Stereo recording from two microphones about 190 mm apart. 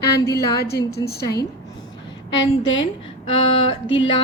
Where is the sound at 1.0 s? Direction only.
20° left (ahead or behind).